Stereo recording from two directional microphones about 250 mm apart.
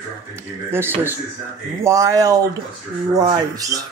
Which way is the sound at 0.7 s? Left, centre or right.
Centre.